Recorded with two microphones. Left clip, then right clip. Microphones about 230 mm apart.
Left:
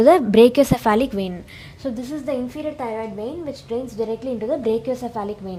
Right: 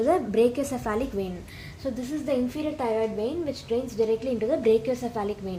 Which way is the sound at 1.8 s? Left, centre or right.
Left.